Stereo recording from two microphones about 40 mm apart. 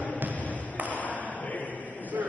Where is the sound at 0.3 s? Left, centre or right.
Left.